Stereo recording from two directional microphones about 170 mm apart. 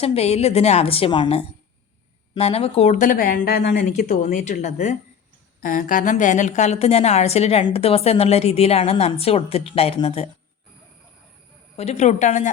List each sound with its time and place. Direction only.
0.0 s a woman's voice: 35° left (ahead or behind)
11.8 s speech: 40° left (ahead or behind)